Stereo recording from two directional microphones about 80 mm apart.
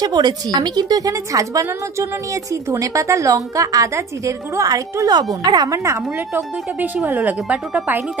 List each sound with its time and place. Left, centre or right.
0.0 s a woman's voice: right
5.1 s speech: right
5.7 s a woman's voice: right
6.1 s speech: right